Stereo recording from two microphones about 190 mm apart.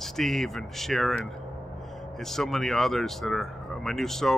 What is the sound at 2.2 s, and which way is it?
Speech, centre (ahead or behind).